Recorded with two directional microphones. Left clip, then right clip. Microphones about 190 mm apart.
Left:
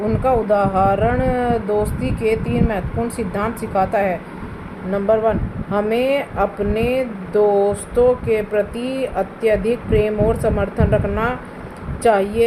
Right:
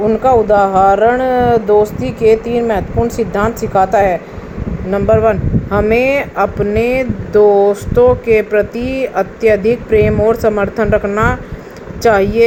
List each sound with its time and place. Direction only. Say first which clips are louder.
0.2 s speech: right 6 dB; 30° right (ahead or behind)